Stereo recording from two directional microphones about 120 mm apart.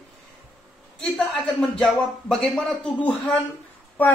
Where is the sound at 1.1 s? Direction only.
5° left (ahead or behind).